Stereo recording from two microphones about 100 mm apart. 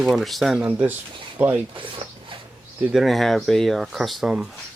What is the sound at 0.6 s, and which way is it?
Speech, 15° right (ahead or behind).